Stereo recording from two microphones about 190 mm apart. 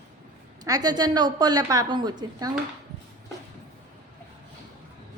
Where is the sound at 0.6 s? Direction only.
20° right (ahead or behind).